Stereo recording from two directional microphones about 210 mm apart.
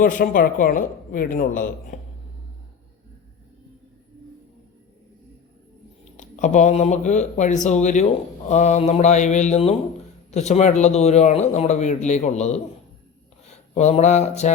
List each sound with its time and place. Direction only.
0.0 s speech: 40° left (ahead or behind)
6.1 s speech: 35° left (ahead or behind)